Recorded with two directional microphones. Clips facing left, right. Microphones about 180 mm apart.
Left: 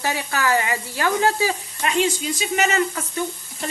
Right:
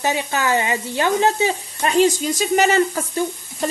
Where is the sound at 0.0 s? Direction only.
20° right (ahead or behind).